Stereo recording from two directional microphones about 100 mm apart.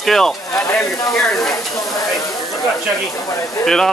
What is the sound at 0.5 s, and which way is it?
Speech, 30° left (ahead or behind).